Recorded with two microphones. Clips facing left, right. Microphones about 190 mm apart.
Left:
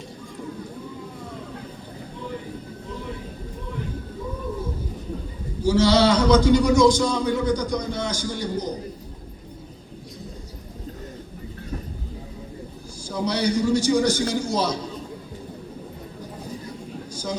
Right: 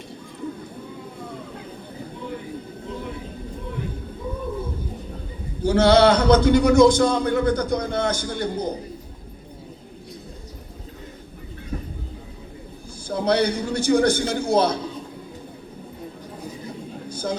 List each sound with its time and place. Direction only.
5.6 s a man's voice: 55° right (ahead or behind)
13.1 s a man's voice: 55° right (ahead or behind)
17.1 s a sound: 55° right (ahead or behind)